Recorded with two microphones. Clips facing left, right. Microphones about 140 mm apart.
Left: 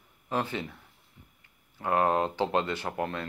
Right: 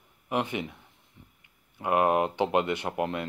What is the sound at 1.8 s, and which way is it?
Speech, 15° right (ahead or behind).